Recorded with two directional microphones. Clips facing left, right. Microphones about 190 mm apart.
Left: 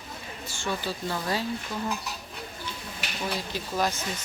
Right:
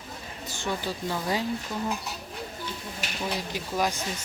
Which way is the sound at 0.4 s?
20° right (ahead or behind).